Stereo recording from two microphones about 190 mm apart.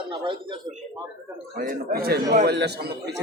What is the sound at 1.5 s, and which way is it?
A man's voice, 50° right (ahead or behind).